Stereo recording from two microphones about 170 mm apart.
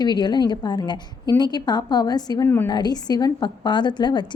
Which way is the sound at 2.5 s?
10° left (ahead or behind).